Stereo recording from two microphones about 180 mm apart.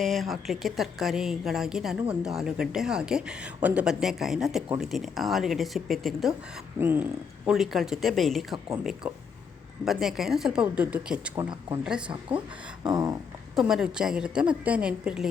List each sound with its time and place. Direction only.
0.0 s a woman's voice: centre (ahead or behind)
6.7 s a woman's voice: 10° right (ahead or behind)
12.8 s a sound: 20° right (ahead or behind)
13.6 s a woman's voice: 5° right (ahead or behind)